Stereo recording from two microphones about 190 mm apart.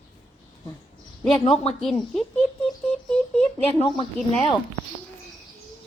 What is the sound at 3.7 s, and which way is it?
Speech, 30° left (ahead or behind).